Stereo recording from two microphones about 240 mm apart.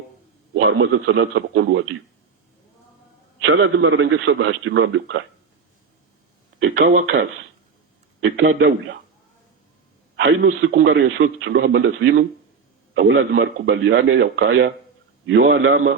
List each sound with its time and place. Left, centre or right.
0.5 s a man's voice: right
3.5 s a man's voice: right
6.6 s a man's voice: right
8.2 s a man's voice: right
10.2 s a man's voice: right